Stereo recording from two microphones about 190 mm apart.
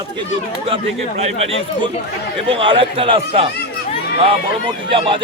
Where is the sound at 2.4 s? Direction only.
30° right (ahead or behind).